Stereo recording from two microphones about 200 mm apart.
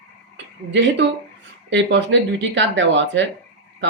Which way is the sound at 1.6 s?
65° right (ahead or behind).